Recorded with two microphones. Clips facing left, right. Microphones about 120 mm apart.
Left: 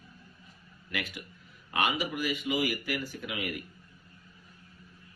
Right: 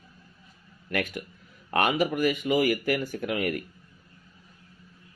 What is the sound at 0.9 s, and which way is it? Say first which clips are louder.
Speech: right 8 dB; 50° right (ahead or behind).